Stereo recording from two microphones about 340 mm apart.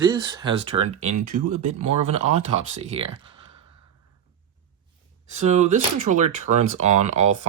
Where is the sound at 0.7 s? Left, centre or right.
Right.